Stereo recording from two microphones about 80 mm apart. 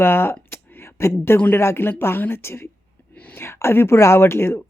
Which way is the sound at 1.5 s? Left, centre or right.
Left.